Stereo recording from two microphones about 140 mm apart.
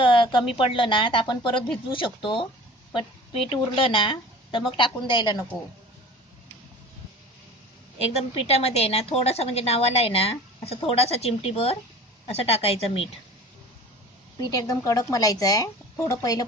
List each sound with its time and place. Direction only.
0.0 s a sound: 40° left (ahead or behind)
0.6 s a woman's voice: 40° left (ahead or behind)
8.2 s a woman's voice: 50° left (ahead or behind)
14.4 s speech: 25° left (ahead or behind)